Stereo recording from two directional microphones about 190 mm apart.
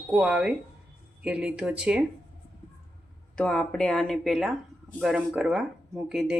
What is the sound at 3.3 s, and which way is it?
Speech, 5° left (ahead or behind).